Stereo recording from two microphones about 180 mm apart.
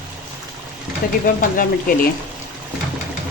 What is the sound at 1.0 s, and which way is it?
Speech, 50° left (ahead or behind).